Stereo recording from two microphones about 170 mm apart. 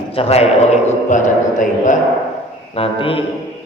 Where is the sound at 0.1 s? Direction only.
35° left (ahead or behind).